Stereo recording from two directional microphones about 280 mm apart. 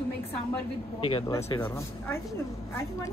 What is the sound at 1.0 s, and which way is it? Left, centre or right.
Speech, centre.